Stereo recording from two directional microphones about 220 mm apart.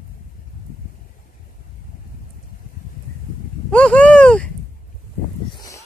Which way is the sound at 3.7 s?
5° left (ahead or behind).